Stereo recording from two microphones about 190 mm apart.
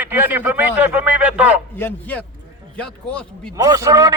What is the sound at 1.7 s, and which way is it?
A man's voice, 10° left (ahead or behind).